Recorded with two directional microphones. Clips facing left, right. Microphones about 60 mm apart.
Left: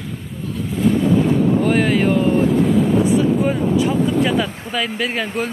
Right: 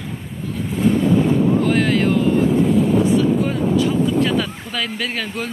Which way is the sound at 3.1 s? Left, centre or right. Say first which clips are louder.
Left 1 dB; centre.